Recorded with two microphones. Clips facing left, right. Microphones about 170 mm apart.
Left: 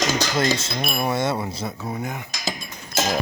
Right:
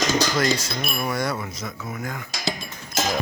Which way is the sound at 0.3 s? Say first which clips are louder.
Left 1 dB; 25° left (ahead or behind).